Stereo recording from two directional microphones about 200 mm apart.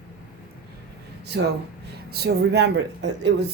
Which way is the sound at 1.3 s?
65° right (ahead or behind).